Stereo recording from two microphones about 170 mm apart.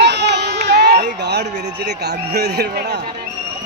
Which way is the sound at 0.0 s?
90° right.